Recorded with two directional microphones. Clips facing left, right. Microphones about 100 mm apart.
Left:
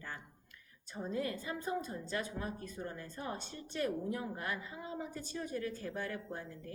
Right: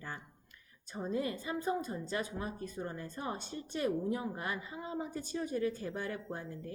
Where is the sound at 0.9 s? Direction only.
20° right (ahead or behind).